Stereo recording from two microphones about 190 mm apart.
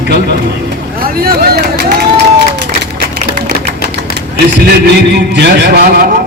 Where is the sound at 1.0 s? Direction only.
50° right (ahead or behind).